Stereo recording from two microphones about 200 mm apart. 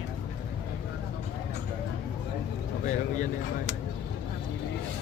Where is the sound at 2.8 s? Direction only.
40° left (ahead or behind).